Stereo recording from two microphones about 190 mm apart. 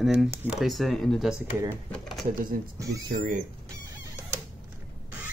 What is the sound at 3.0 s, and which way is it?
Speech, 45° right (ahead or behind).